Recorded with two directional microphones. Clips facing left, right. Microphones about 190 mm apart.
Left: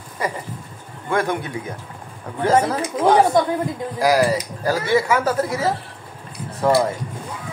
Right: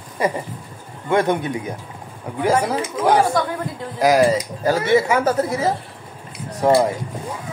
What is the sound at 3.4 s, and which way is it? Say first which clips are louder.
Speech: left 4 dB; 20° left (ahead or behind).